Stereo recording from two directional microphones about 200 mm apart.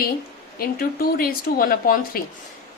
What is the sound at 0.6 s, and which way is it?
A woman's voice, 50° left (ahead or behind).